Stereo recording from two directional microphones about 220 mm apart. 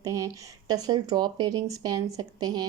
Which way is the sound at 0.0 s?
15° right (ahead or behind).